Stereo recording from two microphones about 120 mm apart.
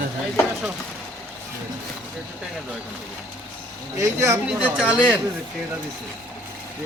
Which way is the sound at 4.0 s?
25° right (ahead or behind).